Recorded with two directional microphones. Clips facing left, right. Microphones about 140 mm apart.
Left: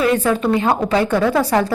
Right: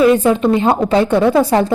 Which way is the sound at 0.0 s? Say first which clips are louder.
Right 5 dB; 20° right (ahead or behind).